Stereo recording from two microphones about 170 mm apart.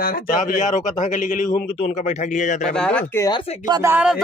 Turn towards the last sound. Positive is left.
turn(degrees=-5)  # may be behind; listen again after turning